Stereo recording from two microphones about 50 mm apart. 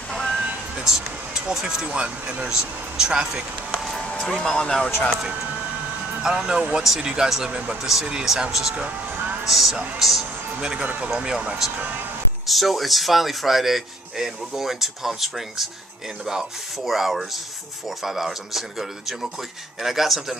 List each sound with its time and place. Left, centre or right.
0.1 s music: centre
0.8 s speech: centre
1.9 s speech: right
4.4 s speech: centre
6.2 s speech: centre
9.1 s music: right
9.4 s speech: centre
10.8 s speech: right
11.1 s speech: centre
11.7 s speech: right
12.4 s speech: centre
16.8 s speech: centre